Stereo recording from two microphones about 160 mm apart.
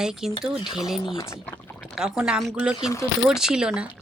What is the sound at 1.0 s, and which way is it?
Speech, 20° left (ahead or behind).